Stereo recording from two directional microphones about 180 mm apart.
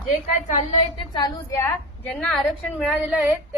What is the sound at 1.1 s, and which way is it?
Speech, 20° left (ahead or behind).